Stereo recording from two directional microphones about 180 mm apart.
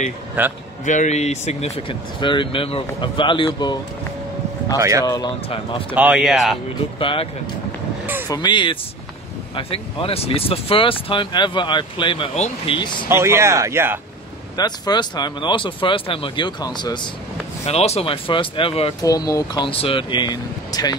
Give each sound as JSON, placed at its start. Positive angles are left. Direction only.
{"t": 0.4, "sound": "speech", "side_deg": -10}
{"t": 0.8, "sound": "speech", "side_deg": 40}
{"t": 4.7, "sound": "speech", "side_deg": -15}
{"t": 5.0, "sound": "speech", "side_deg": 20}
{"t": 5.9, "sound": "speech", "side_deg": -5}
{"t": 7.0, "sound": "speech", "side_deg": 30}
{"t": 8.3, "sound": "speech", "side_deg": 25}
{"t": 13.1, "sound": "speech", "side_deg": -15}
{"t": 14.6, "sound": "speech", "side_deg": 25}
{"t": 17.6, "sound": "speech", "side_deg": 35}
{"t": 19.0, "sound": "speech", "side_deg": 20}